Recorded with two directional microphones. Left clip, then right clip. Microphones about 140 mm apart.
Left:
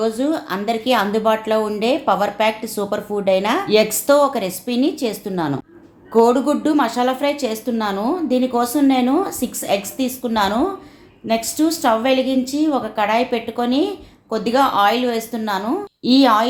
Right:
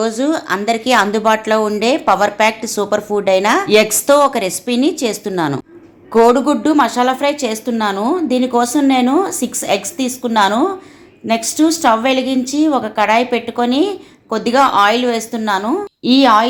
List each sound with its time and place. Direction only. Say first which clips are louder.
0.0 s a woman's voice: right 3 dB; 20° right (ahead or behind)